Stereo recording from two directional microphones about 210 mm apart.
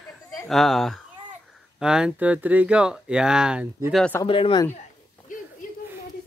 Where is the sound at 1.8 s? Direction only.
5° right (ahead or behind).